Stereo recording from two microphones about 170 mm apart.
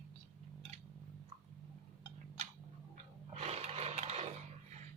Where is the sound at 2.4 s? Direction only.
40° right (ahead or behind).